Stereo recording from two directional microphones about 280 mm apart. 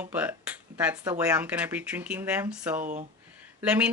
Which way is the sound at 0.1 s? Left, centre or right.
Centre.